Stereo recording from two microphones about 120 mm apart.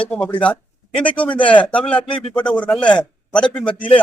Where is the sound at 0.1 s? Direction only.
10° left (ahead or behind).